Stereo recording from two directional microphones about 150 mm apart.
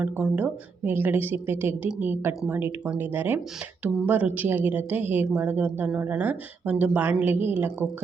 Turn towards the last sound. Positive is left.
turn(degrees=-15)  # may be behind; listen again after turning